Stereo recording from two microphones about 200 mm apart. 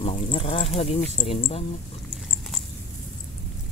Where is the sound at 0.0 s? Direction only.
30° left (ahead or behind).